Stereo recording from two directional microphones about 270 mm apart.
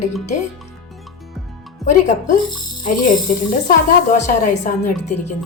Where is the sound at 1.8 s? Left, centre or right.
Left.